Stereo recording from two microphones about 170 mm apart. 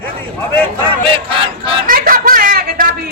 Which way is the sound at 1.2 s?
30° right (ahead or behind).